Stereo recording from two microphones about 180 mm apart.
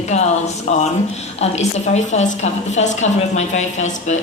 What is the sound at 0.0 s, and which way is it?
A woman's voice, 40° left (ahead or behind).